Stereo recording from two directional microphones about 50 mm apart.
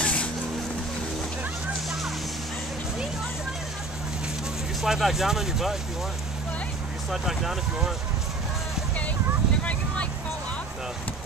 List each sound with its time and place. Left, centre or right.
0.0 s vehicle: left
4.8 s speech: centre
7.1 s speech: centre